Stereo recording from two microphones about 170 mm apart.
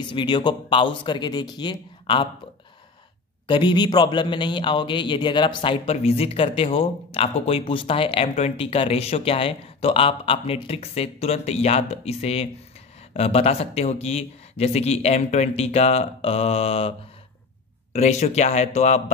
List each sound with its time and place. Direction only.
0.1 s speech: 25° left (ahead or behind)
3.4 s a man's voice: 30° left (ahead or behind)
17.9 s a man's voice: 40° left (ahead or behind)